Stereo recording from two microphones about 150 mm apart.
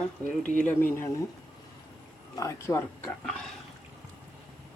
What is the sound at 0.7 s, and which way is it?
Speech, 15° left (ahead or behind).